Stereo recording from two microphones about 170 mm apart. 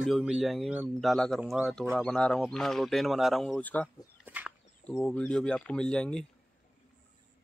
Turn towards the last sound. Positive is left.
turn(degrees=5)  # may be behind; listen again after turning